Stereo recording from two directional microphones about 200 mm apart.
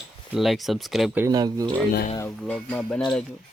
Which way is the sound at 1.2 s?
20° right (ahead or behind).